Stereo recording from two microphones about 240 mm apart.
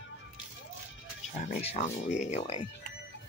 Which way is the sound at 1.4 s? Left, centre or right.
Left.